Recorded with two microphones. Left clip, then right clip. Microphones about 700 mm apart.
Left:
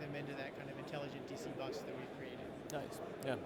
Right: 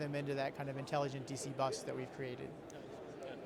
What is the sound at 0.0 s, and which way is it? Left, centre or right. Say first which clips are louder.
Speech: right 6 dB; right.